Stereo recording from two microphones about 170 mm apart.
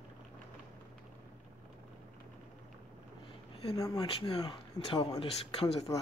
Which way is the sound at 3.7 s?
25° left (ahead or behind).